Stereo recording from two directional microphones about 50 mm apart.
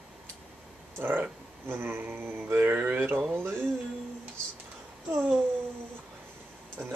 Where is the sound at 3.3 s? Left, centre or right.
Right.